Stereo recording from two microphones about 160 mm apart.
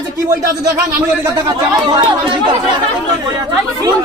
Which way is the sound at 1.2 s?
25° right (ahead or behind).